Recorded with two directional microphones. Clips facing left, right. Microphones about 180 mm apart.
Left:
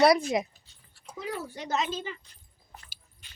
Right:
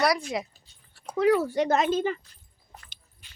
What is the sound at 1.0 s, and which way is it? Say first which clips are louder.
Speech: right 14 dB; 75° right (ahead or behind).